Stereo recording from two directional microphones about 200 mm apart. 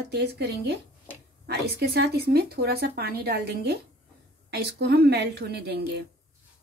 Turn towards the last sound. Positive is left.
turn(degrees=-55)  # may be behind; listen again after turning